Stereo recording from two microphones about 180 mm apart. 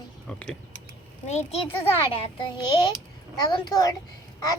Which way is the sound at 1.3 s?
35° left (ahead or behind).